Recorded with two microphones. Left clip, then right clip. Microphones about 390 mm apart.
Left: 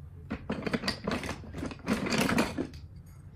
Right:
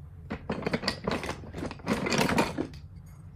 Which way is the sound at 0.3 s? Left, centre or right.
Right.